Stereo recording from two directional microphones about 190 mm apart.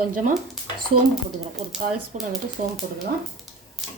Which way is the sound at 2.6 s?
40° right (ahead or behind).